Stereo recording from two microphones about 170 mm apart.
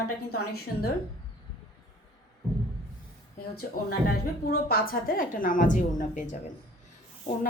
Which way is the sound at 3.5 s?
65° left (ahead or behind).